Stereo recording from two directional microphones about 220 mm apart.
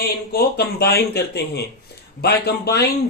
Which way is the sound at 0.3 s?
45° left (ahead or behind).